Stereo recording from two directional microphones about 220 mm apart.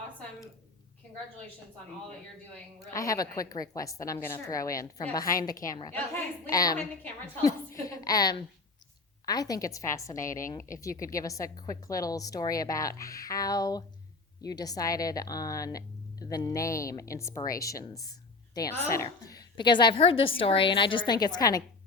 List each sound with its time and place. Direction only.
2.9 s a woman's voice: 15° left (ahead or behind)
19.0 s a woman's voice: 20° left (ahead or behind)